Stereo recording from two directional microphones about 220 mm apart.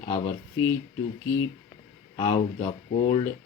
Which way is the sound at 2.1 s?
20° left (ahead or behind).